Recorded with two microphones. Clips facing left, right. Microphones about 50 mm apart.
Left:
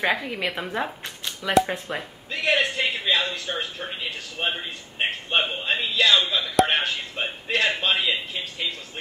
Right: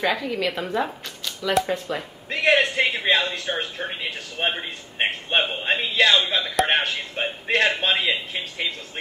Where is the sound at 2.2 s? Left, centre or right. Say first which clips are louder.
Right 4 dB; right.